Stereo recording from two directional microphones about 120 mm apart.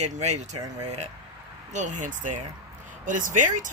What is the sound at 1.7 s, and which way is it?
Speech, 85° right.